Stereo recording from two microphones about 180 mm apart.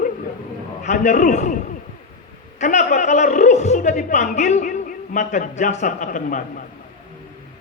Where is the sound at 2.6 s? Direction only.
40° left (ahead or behind).